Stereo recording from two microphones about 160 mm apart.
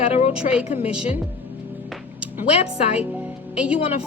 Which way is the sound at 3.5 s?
10° right (ahead or behind).